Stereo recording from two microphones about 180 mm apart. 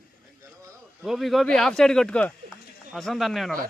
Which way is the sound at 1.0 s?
Centre (ahead or behind).